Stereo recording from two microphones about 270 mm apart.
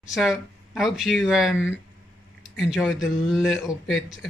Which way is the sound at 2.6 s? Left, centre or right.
Centre.